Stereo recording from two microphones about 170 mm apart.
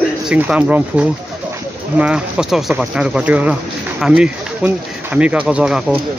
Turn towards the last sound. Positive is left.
turn(degrees=-5)  # may be behind; listen again after turning